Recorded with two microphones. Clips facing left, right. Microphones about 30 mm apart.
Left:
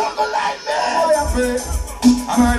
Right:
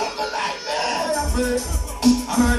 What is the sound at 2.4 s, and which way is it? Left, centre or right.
Music, left.